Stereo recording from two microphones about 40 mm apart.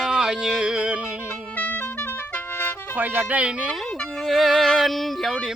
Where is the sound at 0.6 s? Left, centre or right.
Right.